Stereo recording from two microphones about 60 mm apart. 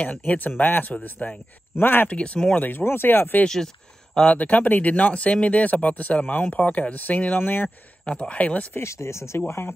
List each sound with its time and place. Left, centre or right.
0.0 s speech: left
1.8 s speech: left
2.0 s speech: left
2.5 s speech: left
3.4 s speech: centre
4.4 s speech: left
8.0 s speech: centre
8.7 s speech: left
9.5 s speech: left